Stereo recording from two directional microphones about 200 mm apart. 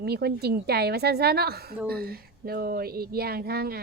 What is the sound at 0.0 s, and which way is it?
Speech, 55° right (ahead or behind).